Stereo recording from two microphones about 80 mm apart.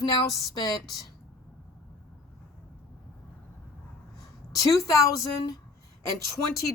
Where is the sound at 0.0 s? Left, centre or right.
Left.